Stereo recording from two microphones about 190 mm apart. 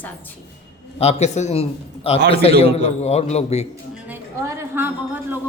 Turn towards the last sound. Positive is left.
turn(degrees=-10)  # may be behind; listen again after turning